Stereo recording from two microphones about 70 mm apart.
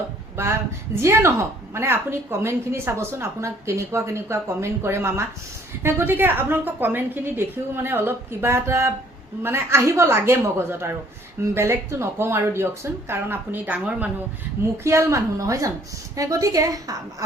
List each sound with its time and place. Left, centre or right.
0.4 s a woman's voice: right
14.8 s a woman's voice: right